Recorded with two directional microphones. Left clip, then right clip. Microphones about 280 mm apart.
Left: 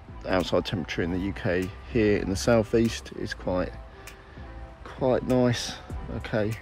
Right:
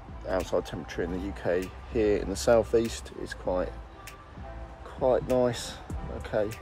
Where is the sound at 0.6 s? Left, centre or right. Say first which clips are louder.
Left 3 dB; left.